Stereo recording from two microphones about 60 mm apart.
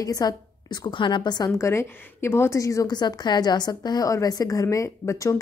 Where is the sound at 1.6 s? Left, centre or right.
Left.